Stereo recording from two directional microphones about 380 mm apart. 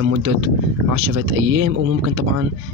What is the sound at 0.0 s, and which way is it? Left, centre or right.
Speech, right.